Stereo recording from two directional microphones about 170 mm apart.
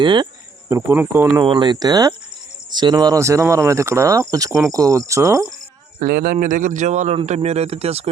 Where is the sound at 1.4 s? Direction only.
25° right (ahead or behind).